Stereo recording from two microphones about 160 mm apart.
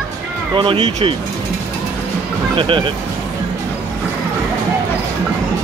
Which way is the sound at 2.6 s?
35° right (ahead or behind).